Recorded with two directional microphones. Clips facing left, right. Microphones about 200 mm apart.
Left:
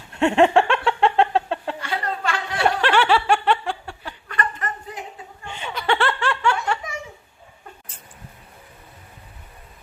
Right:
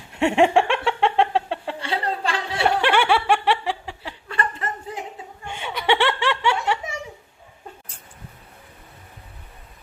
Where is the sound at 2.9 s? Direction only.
15° right (ahead or behind).